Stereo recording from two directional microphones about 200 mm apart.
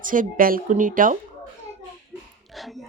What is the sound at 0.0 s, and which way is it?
A woman's voice, 40° right (ahead or behind).